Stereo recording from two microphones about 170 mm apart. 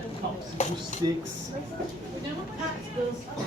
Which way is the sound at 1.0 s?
25° right (ahead or behind).